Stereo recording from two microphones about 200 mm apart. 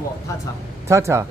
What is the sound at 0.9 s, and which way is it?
Speech, 15° right (ahead or behind).